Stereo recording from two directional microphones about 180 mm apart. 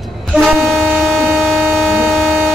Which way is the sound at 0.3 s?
Centre (ahead or behind).